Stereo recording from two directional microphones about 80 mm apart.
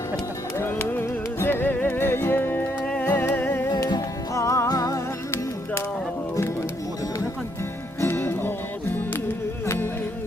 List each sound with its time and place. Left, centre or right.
0.6 s music: left
2.8 s music: centre
3.7 s music: left
4.4 s music: left
8.0 s music: left
9.6 s music: left